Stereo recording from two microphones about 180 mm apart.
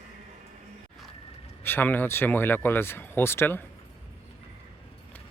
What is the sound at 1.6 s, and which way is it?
Speech, 10° left (ahead or behind).